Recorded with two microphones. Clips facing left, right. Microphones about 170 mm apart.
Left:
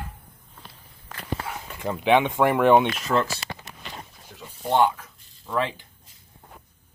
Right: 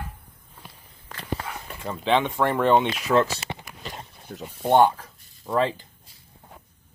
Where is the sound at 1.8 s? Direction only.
15° left (ahead or behind).